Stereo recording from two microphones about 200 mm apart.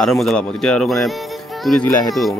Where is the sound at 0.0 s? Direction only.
Centre (ahead or behind).